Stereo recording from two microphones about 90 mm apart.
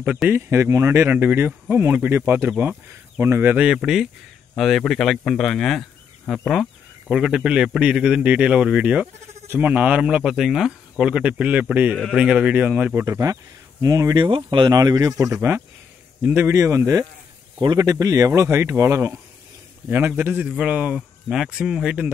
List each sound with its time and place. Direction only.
0.3 s speech: 30° right (ahead or behind)
2.5 s a man's voice: 10° right (ahead or behind)
3.2 s speech: 25° right (ahead or behind)
3.5 s speech: 10° right (ahead or behind)
7.1 s a man's voice: 10° right (ahead or behind)
12.0 s a man's voice: 5° right (ahead or behind)
13.0 s speech: 35° right (ahead or behind)
14.1 s speech: 60° right (ahead or behind)
14.7 s speech: 45° right (ahead or behind)
16.2 s a man's voice: 15° right (ahead or behind)
16.4 s speech: 30° right (ahead or behind)
19.9 s a man's voice: 20° right (ahead or behind); by 21.9 s 5° right (ahead or behind)